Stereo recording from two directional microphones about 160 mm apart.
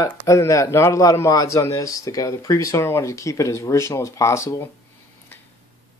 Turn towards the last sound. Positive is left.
turn(degrees=20)  # may be behind; listen again after turning